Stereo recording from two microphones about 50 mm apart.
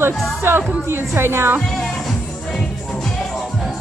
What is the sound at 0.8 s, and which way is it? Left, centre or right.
Speech, right.